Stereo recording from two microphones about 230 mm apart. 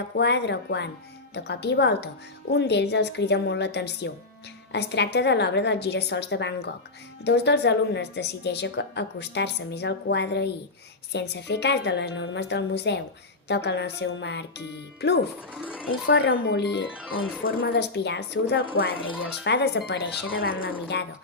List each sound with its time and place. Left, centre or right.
0.2 s speech: left
15.5 s speech: centre
15.9 s speech: left